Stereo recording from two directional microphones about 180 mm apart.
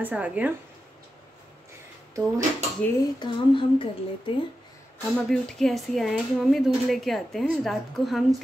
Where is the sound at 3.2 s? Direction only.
30° left (ahead or behind).